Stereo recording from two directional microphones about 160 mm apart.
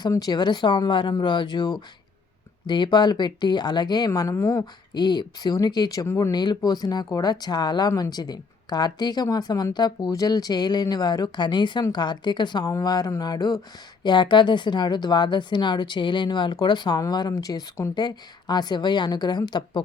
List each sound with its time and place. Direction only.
0.0 s speech: 25° left (ahead or behind)